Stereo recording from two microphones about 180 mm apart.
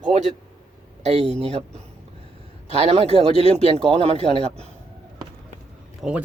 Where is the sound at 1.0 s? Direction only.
35° right (ahead or behind).